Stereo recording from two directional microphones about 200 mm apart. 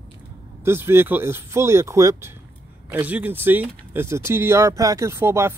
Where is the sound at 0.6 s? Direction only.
10° right (ahead or behind).